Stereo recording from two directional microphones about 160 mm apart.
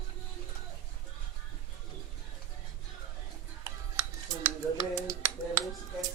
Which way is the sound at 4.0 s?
20° right (ahead or behind).